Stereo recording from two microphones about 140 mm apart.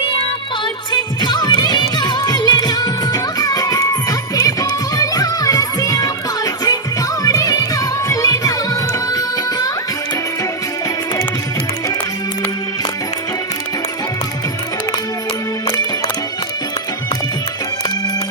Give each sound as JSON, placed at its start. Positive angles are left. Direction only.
{"t": 0.6, "sound": "music", "side_deg": 30}